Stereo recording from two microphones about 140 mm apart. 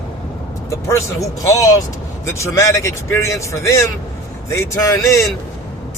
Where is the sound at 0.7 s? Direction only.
20° left (ahead or behind).